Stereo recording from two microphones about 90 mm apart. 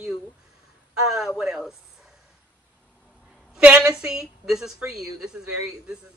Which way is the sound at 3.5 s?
10° right (ahead or behind).